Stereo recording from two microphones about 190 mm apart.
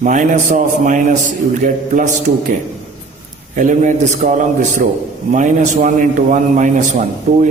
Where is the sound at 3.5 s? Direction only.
40° right (ahead or behind).